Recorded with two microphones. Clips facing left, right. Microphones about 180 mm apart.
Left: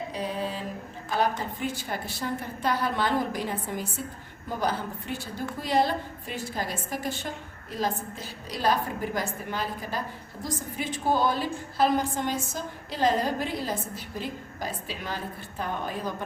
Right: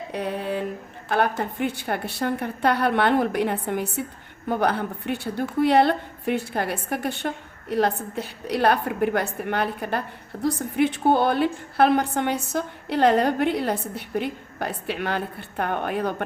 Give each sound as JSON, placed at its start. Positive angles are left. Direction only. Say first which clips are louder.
{"t": 0.1, "sound": "a woman's voice", "louder": "right 7 dB", "side_deg": -60}